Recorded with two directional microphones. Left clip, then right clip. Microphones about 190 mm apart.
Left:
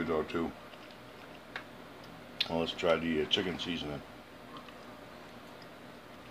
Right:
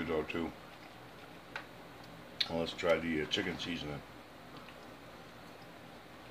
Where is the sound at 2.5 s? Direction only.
20° left (ahead or behind).